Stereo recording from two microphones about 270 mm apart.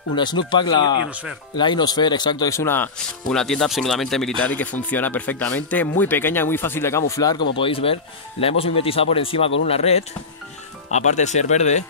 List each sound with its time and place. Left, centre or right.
0.1 s speech: centre